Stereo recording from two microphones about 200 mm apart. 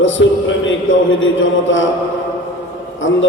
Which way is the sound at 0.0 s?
70° left (ahead or behind).